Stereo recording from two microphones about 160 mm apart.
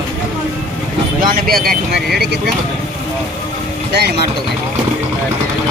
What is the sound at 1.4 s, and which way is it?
Speech, 70° right (ahead or behind).